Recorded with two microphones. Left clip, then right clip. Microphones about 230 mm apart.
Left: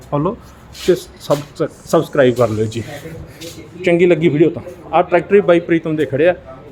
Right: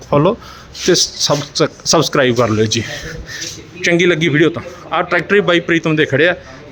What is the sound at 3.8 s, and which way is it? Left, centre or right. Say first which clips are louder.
A man's voice: even; centre.